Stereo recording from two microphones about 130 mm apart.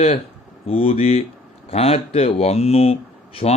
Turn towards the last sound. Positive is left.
turn(degrees=50)  # may be behind; listen again after turning